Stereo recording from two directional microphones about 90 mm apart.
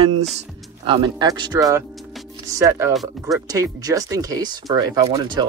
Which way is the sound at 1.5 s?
40° right (ahead or behind).